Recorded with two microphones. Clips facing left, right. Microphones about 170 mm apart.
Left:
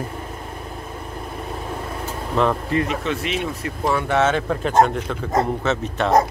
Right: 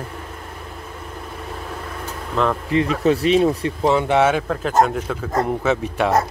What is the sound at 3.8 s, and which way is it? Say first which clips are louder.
Speech: right 3 dB; 15° right (ahead or behind).